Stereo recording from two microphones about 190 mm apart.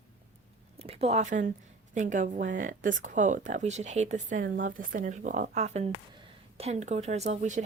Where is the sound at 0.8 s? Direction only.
30° right (ahead or behind).